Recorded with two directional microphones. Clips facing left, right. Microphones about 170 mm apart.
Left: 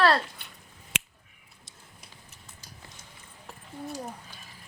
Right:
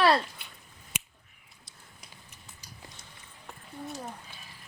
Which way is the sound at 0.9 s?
90° left.